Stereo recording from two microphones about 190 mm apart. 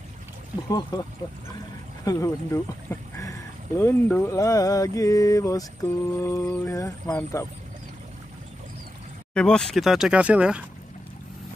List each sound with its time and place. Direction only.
0.7 s speech: 20° left (ahead or behind)
2.0 s speech: 15° left (ahead or behind)
9.3 s speech: 5° left (ahead or behind)